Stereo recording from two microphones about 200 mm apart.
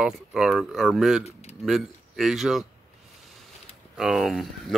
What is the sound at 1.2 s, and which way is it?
Speech, 30° left (ahead or behind).